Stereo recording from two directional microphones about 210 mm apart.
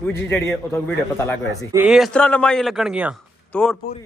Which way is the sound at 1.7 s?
5° right (ahead or behind).